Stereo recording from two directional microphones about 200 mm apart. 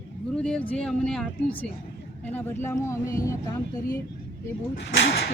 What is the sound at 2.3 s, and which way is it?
Speech, 10° left (ahead or behind).